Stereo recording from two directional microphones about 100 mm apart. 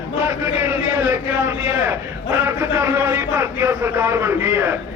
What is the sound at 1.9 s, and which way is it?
A man's voice, 25° right (ahead or behind).